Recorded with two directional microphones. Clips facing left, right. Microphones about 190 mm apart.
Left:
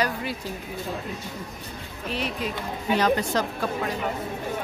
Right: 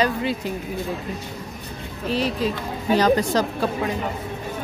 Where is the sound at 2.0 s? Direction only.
35° right (ahead or behind).